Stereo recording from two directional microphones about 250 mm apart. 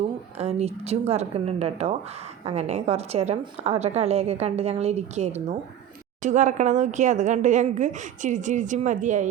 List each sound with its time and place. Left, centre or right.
0.3 s a woman's voice: right